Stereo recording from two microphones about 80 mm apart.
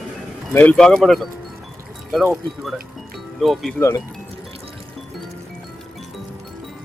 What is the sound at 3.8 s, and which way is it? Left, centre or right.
Speech, left.